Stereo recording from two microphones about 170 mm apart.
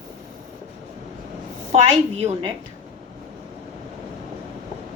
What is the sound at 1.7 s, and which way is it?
Speech, 35° right (ahead or behind).